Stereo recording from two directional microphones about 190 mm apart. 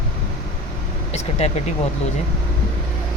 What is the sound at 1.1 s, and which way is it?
Speech, 35° left (ahead or behind).